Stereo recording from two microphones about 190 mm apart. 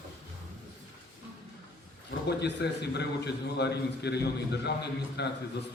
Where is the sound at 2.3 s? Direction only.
60° left (ahead or behind).